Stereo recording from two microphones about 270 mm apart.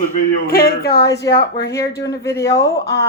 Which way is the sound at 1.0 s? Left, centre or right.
Centre.